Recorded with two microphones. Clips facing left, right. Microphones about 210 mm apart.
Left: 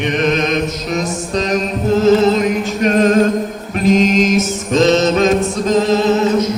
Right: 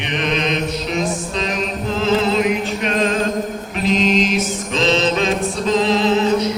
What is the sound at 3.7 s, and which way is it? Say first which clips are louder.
Mantra: left 5 dB; 45° left (ahead or behind).